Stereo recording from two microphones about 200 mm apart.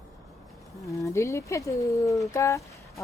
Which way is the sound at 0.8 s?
15° left (ahead or behind).